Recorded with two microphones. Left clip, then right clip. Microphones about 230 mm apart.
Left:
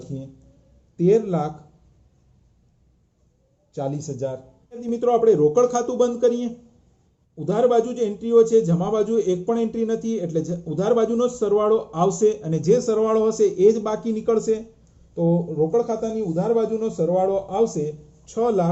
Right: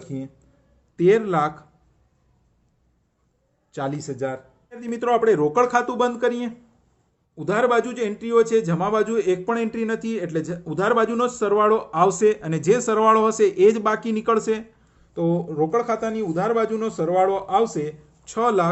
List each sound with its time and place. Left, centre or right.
0.0 s a man's voice: right
3.7 s speech: right
5.1 s a man's voice: right